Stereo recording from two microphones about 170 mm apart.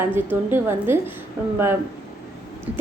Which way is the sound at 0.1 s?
10° right (ahead or behind).